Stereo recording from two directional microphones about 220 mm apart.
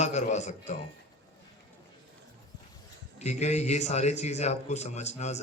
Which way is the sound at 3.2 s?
30° left (ahead or behind).